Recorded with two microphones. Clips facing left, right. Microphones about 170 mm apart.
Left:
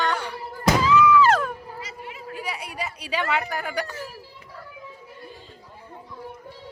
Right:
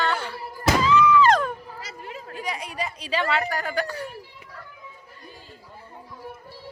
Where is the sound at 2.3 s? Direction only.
10° left (ahead or behind).